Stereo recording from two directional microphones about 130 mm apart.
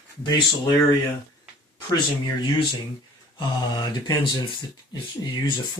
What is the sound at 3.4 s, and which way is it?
Mantra, 35° left (ahead or behind).